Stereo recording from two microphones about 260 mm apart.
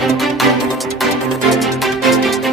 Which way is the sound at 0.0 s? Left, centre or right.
Centre.